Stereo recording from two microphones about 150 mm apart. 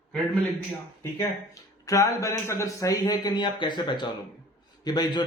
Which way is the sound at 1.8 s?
20° left (ahead or behind).